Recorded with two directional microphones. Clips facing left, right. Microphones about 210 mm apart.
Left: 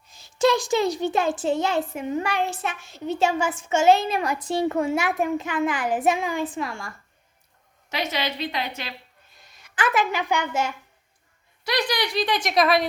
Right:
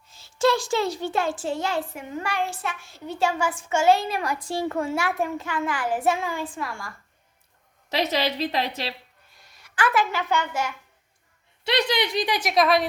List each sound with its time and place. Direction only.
0.1 s a child's voice: 15° left (ahead or behind)
7.9 s a woman's voice: 35° right (ahead or behind)
9.3 s a woman's voice: 20° left (ahead or behind)
11.6 s a woman's voice: 25° right (ahead or behind); by 12.8 s centre (ahead or behind)